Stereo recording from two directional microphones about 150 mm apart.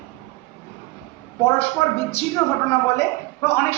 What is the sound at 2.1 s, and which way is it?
A woman's voice, 20° left (ahead or behind).